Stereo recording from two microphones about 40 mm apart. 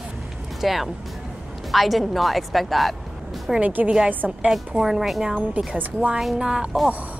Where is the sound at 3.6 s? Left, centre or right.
Right.